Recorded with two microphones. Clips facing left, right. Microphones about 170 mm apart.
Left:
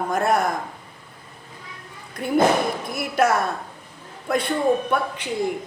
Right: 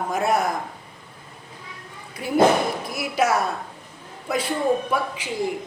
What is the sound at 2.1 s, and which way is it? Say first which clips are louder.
Speech: right 1 dB; 5° right (ahead or behind).